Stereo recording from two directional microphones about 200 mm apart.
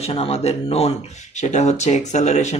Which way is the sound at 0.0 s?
30° left (ahead or behind).